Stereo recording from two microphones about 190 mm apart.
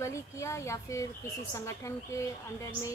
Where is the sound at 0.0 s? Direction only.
15° left (ahead or behind).